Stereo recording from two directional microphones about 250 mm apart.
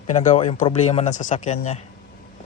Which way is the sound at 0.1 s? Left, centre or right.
Left.